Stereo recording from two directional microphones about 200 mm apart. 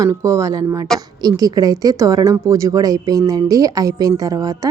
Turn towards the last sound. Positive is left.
turn(degrees=-15)  # may be behind; listen again after turning